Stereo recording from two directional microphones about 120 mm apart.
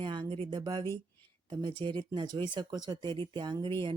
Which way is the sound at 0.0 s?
40° right (ahead or behind).